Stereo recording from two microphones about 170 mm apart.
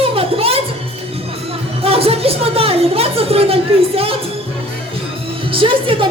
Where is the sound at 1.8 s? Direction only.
35° right (ahead or behind).